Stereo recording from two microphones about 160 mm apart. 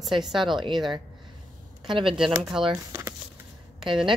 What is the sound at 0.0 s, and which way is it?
Speech, centre (ahead or behind).